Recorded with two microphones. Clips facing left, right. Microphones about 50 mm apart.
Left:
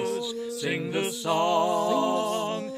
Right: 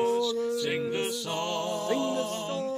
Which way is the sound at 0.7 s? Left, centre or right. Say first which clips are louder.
Left 1 dB; centre.